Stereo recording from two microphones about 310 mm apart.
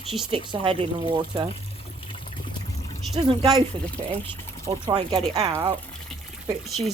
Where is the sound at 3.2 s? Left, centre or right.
Centre.